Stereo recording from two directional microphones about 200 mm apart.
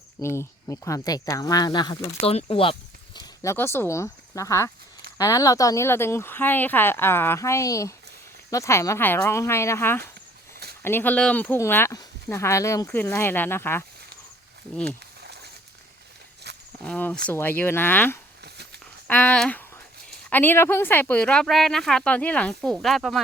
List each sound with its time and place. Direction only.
0.2 s speech: 15° left (ahead or behind)
3.2 s speech: 15° left (ahead or behind)
16.4 s walk: 55° right (ahead or behind)
16.8 s speech: 5° left (ahead or behind)
18.4 s a sound: 55° right (ahead or behind)
19.0 s speech: 10° left (ahead or behind)